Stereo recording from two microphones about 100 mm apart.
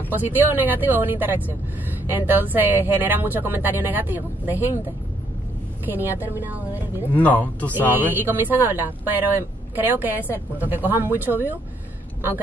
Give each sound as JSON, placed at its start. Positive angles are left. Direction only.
{"t": 0.1, "sound": "speech", "side_deg": -20}
{"t": 6.2, "sound": "speech", "side_deg": -20}
{"t": 7.2, "sound": "speech", "side_deg": 15}
{"t": 7.9, "sound": "speech", "side_deg": -20}